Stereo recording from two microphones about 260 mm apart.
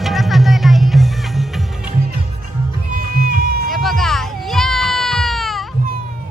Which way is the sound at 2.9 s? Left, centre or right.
Right.